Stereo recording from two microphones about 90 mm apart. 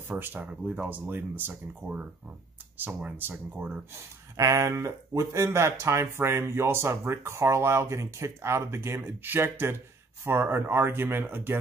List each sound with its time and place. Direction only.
0.2 s speech: 20° right (ahead or behind)
3.9 s speech: 35° right (ahead or behind)